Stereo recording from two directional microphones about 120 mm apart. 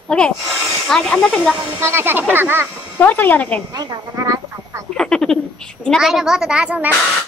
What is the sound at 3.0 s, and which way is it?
Speech, 15° left (ahead or behind).